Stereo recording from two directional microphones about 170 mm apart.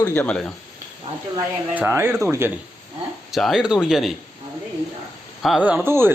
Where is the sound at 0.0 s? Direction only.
10° left (ahead or behind).